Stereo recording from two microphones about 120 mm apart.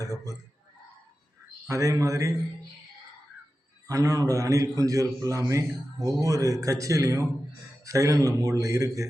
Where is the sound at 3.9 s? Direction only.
30° right (ahead or behind).